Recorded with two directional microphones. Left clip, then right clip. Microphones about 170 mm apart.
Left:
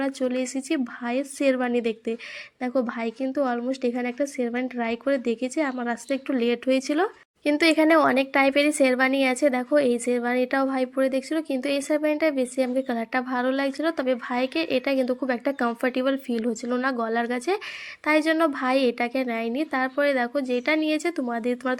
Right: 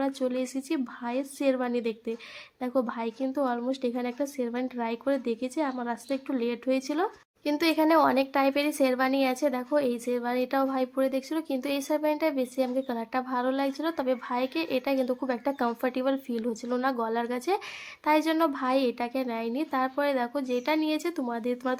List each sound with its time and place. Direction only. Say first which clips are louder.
0.0 s a woman's voice: left 3 dB; 15° left (ahead or behind)